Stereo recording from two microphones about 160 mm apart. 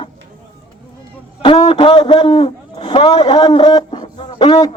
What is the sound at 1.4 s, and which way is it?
Speech, 30° left (ahead or behind).